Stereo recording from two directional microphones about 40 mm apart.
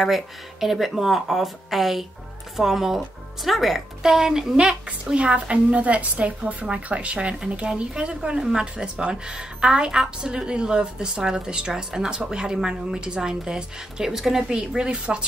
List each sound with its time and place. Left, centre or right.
0.0 s a woman's voice: centre
4.8 s a woman's voice: right
8.4 s a woman's voice: centre